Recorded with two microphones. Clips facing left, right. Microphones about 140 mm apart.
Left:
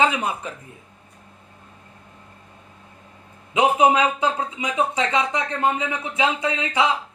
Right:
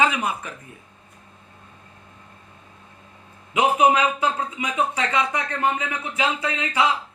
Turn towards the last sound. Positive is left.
turn(degrees=25)  # may be behind; listen again after turning